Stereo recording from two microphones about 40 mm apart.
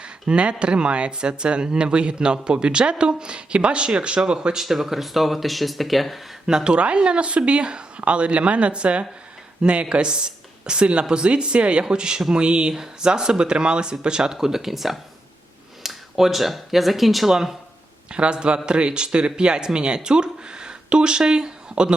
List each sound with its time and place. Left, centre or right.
0.0 s a sound: right
0.6 s a man's voice: right
4.6 s speech: centre
6.7 s a man's voice: right; by 17.3 s centre
18.1 s a man's voice: right